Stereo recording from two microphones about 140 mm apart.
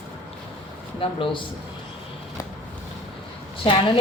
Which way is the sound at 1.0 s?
35° left (ahead or behind).